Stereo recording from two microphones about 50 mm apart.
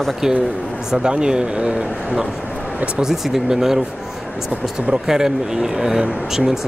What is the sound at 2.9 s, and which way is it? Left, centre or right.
Speech, centre.